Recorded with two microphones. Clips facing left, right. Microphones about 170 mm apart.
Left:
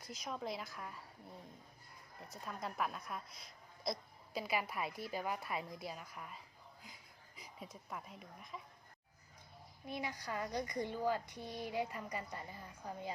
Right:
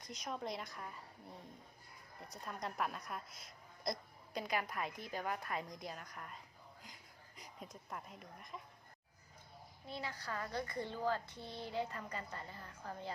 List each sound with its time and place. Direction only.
0.0 s a woman's voice: centre (ahead or behind)
9.8 s a woman's voice: 15° left (ahead or behind)